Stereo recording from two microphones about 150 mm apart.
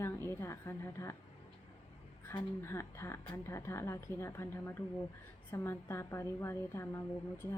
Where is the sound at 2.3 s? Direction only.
15° left (ahead or behind).